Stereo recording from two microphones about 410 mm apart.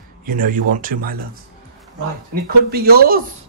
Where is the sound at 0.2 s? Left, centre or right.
Centre.